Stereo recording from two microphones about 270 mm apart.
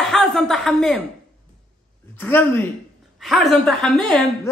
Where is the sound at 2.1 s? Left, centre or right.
Centre.